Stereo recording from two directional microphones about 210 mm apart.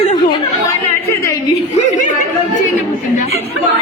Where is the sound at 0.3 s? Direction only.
10° left (ahead or behind).